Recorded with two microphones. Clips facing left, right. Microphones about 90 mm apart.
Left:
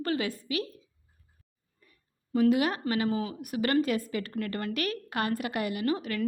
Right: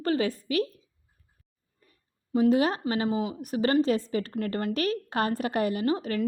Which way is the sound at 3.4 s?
30° right (ahead or behind).